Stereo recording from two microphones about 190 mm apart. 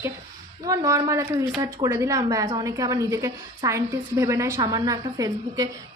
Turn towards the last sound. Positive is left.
turn(degrees=-20)  # may be behind; listen again after turning